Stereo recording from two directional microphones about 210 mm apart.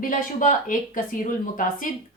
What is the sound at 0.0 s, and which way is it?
Speech, 40° left (ahead or behind).